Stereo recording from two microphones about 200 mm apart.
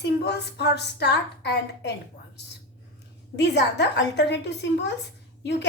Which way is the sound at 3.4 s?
60° left (ahead or behind).